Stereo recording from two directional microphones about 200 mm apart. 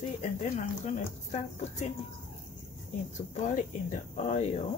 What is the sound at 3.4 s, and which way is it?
A woman's voice, 40° left (ahead or behind).